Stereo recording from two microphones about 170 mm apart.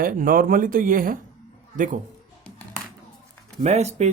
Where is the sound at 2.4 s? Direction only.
10° left (ahead or behind).